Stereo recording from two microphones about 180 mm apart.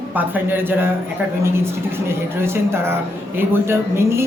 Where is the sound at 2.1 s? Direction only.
15° right (ahead or behind).